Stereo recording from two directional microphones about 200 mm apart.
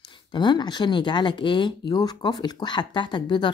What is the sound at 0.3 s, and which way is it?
Speech, 20° left (ahead or behind).